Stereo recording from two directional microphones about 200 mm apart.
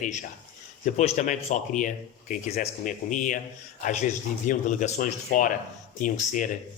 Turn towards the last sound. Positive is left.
turn(degrees=40)  # may be behind; listen again after turning